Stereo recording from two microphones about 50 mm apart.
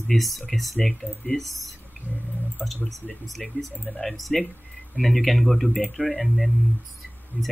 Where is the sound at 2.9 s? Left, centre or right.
Centre.